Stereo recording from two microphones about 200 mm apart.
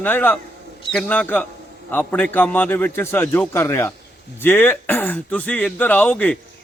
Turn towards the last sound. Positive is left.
turn(degrees=5)  # may be behind; listen again after turning